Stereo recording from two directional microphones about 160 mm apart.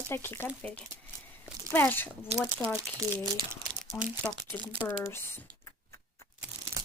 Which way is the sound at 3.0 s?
20° right (ahead or behind).